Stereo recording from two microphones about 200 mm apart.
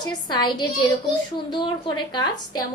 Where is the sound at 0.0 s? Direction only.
20° left (ahead or behind).